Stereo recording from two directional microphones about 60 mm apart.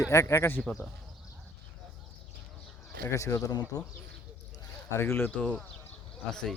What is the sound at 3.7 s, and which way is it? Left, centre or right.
Speech, left.